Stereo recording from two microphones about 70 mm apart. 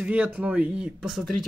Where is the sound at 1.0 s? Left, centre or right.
Centre.